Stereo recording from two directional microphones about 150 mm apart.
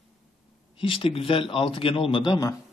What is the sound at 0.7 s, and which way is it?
A man's voice, 35° left (ahead or behind).